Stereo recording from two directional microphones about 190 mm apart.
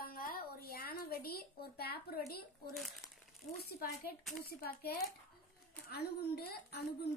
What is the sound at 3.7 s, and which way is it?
A woman's voice, 55° left (ahead or behind).